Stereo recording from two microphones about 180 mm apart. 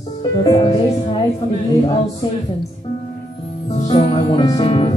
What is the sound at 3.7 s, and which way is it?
Music, 30° left (ahead or behind).